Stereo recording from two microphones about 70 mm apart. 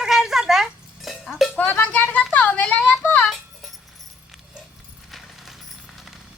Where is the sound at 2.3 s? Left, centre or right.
Centre.